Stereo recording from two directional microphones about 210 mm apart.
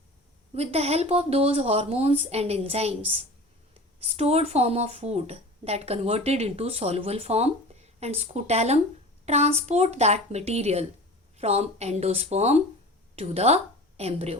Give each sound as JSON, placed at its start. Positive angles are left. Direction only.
{"t": 0.5, "sound": "a woman's voice", "side_deg": -30}